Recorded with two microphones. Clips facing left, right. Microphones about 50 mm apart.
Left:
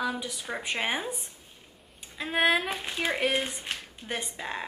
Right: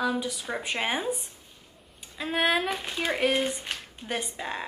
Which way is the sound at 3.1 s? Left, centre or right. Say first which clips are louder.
Right 4 dB; centre.